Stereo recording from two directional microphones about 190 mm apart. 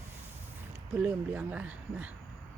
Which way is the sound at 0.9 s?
10° right (ahead or behind).